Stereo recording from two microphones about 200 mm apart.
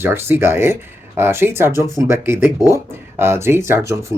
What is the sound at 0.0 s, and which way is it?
Speech, 10° right (ahead or behind).